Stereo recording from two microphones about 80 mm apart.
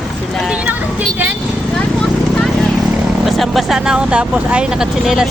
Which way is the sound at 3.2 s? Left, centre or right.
Centre.